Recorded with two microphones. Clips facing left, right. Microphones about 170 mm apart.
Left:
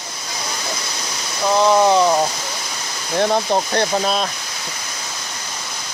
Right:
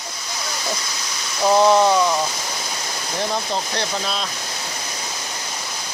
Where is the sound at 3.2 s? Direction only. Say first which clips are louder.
Left 7 dB; 55° left (ahead or behind).